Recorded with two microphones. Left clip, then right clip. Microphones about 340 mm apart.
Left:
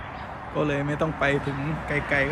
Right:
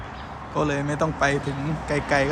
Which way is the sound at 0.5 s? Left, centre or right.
Centre.